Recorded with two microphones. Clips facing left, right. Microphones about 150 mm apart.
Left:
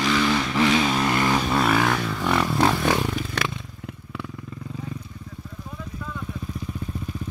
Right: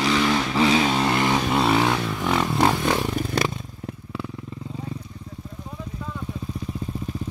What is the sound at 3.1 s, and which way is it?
Motorcycle, 40° right (ahead or behind).